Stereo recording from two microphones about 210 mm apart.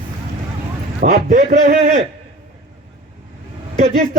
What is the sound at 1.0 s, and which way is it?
A man's voice, 40° right (ahead or behind).